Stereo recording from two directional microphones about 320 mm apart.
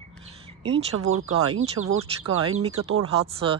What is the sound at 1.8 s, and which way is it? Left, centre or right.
Speech, right.